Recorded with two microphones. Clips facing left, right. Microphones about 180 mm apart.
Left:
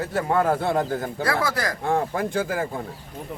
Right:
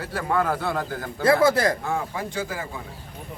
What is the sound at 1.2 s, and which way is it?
Speech, 25° right (ahead or behind).